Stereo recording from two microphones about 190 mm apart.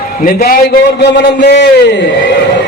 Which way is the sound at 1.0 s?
65° left (ahead or behind).